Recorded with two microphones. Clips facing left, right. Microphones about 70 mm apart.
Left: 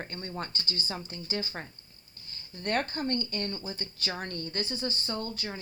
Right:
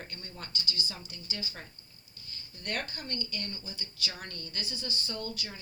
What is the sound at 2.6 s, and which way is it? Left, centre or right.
Speech, left.